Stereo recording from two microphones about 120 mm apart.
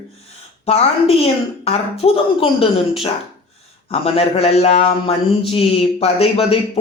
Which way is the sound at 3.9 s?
55° left (ahead or behind).